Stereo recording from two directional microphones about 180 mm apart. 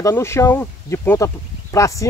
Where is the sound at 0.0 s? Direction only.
15° left (ahead or behind).